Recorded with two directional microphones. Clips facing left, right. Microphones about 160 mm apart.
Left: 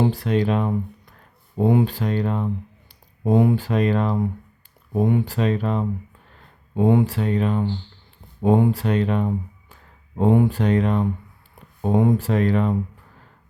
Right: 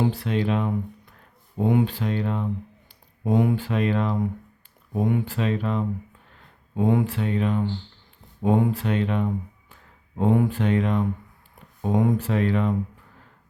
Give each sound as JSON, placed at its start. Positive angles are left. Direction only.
{"t": 0.0, "sound": "speech", "side_deg": 45}
{"t": 5.3, "sound": "speech", "side_deg": 40}
{"t": 6.7, "sound": "speech", "side_deg": 30}
{"t": 7.1, "sound": "speech", "side_deg": 40}
{"t": 10.6, "sound": "speech", "side_deg": 40}
{"t": 12.2, "sound": "speech", "side_deg": 40}